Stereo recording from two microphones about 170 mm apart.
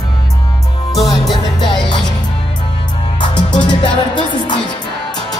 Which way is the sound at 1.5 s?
25° left (ahead or behind).